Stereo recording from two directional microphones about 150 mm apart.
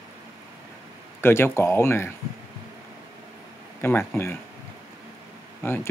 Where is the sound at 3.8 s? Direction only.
15° left (ahead or behind).